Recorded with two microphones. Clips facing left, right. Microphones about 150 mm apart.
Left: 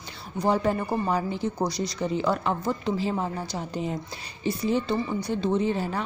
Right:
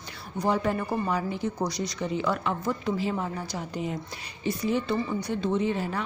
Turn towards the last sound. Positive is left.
turn(degrees=35)  # may be behind; listen again after turning